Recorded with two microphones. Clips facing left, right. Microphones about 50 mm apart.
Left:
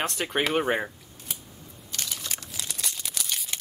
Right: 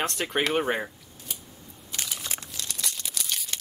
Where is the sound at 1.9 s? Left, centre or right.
Centre.